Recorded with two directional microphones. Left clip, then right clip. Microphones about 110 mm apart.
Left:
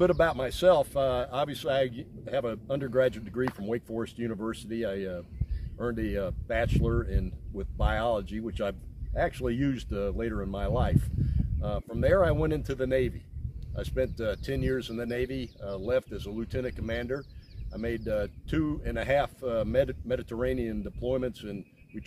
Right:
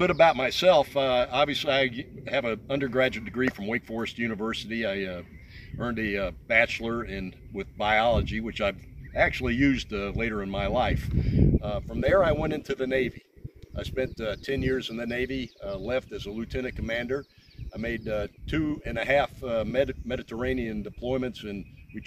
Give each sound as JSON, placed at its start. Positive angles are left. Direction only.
{"t": 0.0, "sound": "speech", "side_deg": 40}